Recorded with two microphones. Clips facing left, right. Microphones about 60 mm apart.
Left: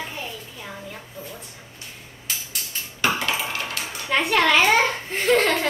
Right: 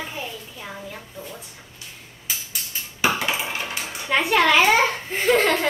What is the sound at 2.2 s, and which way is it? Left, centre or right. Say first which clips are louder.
Cutlery: even; centre.